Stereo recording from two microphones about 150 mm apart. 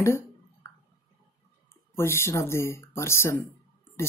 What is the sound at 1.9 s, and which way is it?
Speech, 15° left (ahead or behind).